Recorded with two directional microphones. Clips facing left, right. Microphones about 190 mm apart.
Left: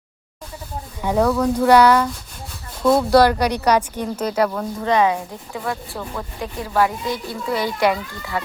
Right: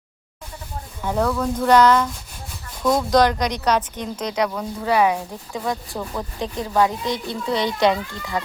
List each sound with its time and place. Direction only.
1.0 s a child's voice: 10° left (ahead or behind); by 8.4 s 20° right (ahead or behind)